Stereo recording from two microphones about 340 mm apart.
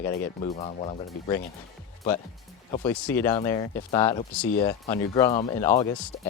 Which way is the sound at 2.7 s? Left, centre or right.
Centre.